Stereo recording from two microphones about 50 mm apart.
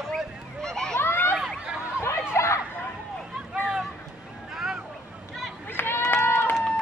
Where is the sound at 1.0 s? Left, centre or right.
Left.